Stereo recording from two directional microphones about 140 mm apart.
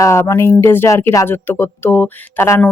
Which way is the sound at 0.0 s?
20° left (ahead or behind).